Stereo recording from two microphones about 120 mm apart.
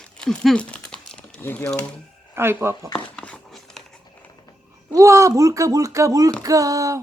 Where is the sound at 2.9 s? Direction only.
10° left (ahead or behind).